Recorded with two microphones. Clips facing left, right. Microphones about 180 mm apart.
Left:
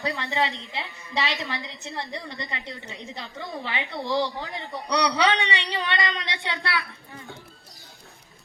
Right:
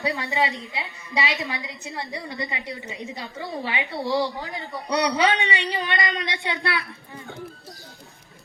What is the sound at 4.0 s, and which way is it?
Speech, centre (ahead or behind).